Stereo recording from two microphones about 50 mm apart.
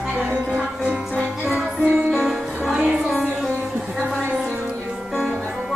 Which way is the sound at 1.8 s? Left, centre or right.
Right.